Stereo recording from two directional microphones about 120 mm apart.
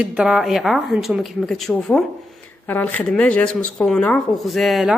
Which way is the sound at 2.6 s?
15° left (ahead or behind).